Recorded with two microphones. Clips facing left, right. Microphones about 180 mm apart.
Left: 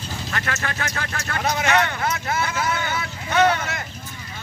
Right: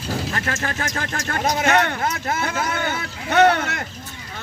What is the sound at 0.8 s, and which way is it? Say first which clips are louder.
Speech: right 2 dB; 40° right (ahead or behind).